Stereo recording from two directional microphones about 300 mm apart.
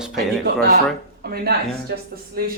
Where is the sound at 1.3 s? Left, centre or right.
Right.